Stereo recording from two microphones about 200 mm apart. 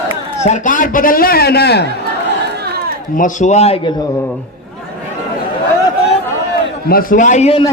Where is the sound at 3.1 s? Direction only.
40° left (ahead or behind).